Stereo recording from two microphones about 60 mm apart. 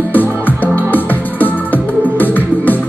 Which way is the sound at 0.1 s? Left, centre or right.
Left.